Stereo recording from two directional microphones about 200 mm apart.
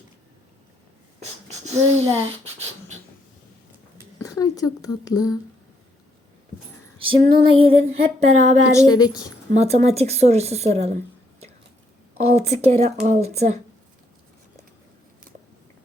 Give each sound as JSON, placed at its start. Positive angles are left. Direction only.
{"t": 1.2, "sound": "a sound", "side_deg": -35}
{"t": 1.9, "sound": "a woman's voice", "side_deg": -30}
{"t": 4.2, "sound": "speech", "side_deg": 20}
{"t": 7.0, "sound": "female singing", "side_deg": -25}
{"t": 8.7, "sound": "a woman's voice", "side_deg": 15}
{"t": 9.5, "sound": "a woman's voice", "side_deg": -35}
{"t": 12.4, "sound": "a woman's voice", "side_deg": -30}